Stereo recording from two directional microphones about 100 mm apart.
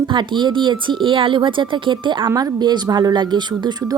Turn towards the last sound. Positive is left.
turn(degrees=-45)  # may be behind; listen again after turning